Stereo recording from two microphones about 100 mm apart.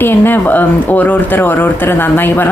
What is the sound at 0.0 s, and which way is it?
Speech, 20° left (ahead or behind).